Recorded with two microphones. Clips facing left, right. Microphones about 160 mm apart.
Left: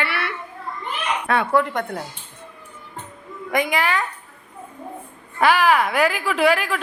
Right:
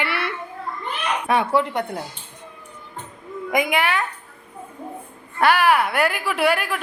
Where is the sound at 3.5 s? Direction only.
10° right (ahead or behind).